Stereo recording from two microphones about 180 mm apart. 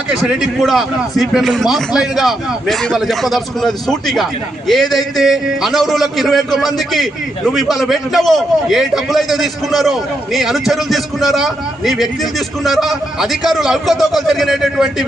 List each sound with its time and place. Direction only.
0.1 s a man's voice: 5° right (ahead or behind)